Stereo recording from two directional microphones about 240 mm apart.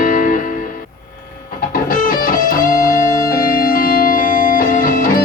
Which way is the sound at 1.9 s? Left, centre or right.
Left.